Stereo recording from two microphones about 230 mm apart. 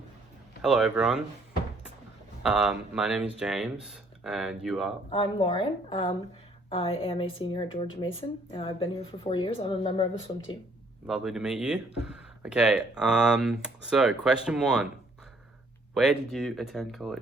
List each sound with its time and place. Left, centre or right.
0.6 s speech: centre
2.4 s speech: centre
5.1 s speech: left
11.0 s speech: centre
16.0 s speech: centre